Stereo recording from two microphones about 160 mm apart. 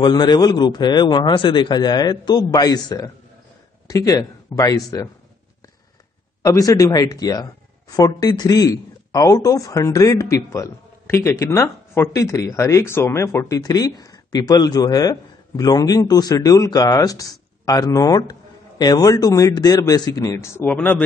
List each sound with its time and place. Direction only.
0.0 s speech: 25° left (ahead or behind)
6.4 s speech: 20° left (ahead or behind)